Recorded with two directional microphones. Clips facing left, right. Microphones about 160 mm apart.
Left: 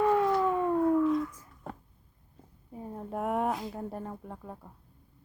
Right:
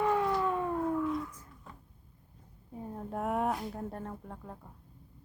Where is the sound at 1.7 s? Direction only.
55° left (ahead or behind).